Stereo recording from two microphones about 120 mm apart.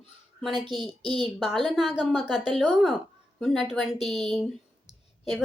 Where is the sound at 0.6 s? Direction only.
40° right (ahead or behind).